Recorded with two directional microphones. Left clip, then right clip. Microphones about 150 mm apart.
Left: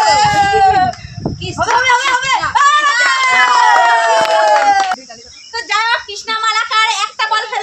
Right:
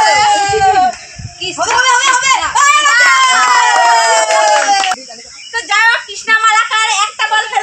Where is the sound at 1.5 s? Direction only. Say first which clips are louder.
Right 1 dB; 15° right (ahead or behind).